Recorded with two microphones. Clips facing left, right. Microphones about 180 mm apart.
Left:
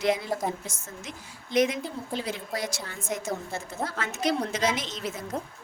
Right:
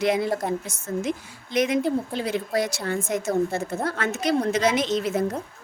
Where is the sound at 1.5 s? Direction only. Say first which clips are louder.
Right 3 dB; 65° right (ahead or behind).